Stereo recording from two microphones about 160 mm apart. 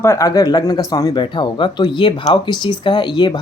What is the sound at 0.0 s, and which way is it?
Speech, 20° left (ahead or behind).